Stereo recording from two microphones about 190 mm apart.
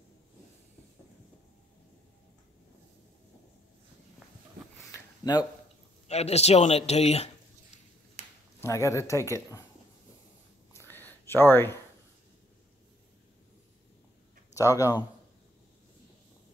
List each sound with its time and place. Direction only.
5.2 s a man's voice: 25° left (ahead or behind)
6.0 s speech: 35° left (ahead or behind)
8.5 s speech: 15° left (ahead or behind)
10.7 s a sound: 10° left (ahead or behind)
14.5 s speech: 15° left (ahead or behind)